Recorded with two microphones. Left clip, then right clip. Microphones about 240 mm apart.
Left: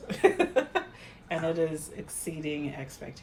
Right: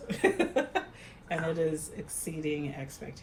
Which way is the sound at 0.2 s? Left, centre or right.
Left.